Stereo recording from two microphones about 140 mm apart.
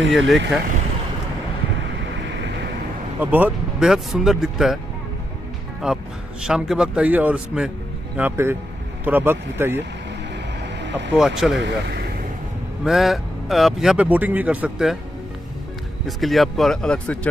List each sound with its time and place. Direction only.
0.1 s speech: centre (ahead or behind)
3.2 s speech: 10° right (ahead or behind)
6.4 s speech: 5° right (ahead or behind)
11.1 s speech: 5° right (ahead or behind)
12.8 s speech: centre (ahead or behind)
16.1 s speech: centre (ahead or behind)